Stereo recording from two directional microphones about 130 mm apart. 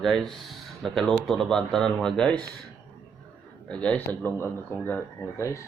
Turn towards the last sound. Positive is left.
turn(degrees=20)  # may be behind; listen again after turning